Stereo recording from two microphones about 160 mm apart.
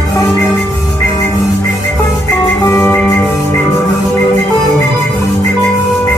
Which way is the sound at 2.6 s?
20° left (ahead or behind).